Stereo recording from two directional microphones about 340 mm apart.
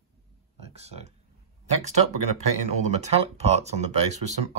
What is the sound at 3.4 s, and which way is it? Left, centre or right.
Speech, centre.